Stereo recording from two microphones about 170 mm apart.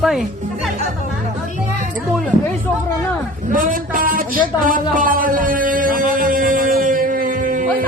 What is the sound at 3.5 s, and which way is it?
Speech, 55° right (ahead or behind).